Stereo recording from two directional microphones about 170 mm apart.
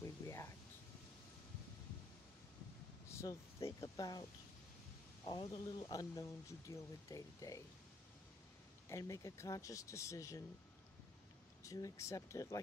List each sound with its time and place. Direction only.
0.0 s a sound: 15° left (ahead or behind)
3.1 s speech: 15° left (ahead or behind)
5.2 s speech: 30° left (ahead or behind)
8.8 s speech: 15° left (ahead or behind)
11.6 s speech: 20° left (ahead or behind)